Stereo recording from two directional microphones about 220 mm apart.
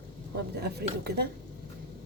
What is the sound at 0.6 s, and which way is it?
Speech, 45° right (ahead or behind).